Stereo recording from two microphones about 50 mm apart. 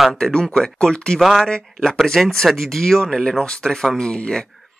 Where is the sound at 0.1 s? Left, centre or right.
Centre.